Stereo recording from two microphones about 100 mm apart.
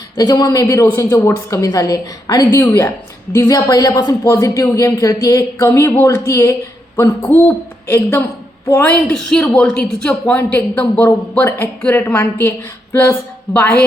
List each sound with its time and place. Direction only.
0.2 s speech: 45° left (ahead or behind)
3.5 s a woman's voice: 40° left (ahead or behind); by 9.1 s 20° left (ahead or behind)
9.1 s a woman's voice: 10° left (ahead or behind)